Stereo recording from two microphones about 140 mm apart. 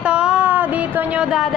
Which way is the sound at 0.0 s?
5° right (ahead or behind).